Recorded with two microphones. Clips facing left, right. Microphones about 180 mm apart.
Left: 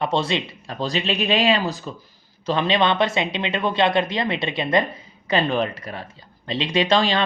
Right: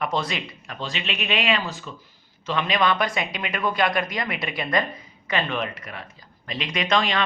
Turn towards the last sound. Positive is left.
turn(degrees=30)  # may be behind; listen again after turning